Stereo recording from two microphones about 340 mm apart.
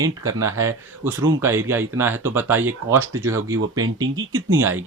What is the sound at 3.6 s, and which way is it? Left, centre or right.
Speech, right.